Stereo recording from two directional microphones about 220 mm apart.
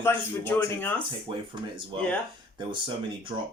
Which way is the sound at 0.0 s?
10° left (ahead or behind).